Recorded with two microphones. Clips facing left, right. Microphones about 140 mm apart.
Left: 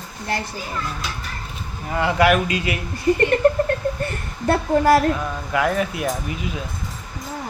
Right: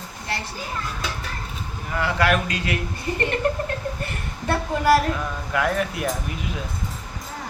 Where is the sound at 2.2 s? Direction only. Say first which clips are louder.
Left 5 dB; 10° left (ahead or behind).